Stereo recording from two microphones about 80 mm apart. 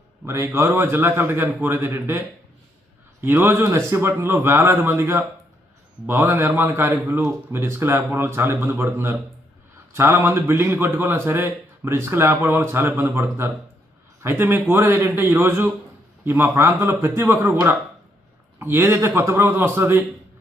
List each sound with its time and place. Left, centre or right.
0.3 s a man's voice: right
18.6 s a man's voice: right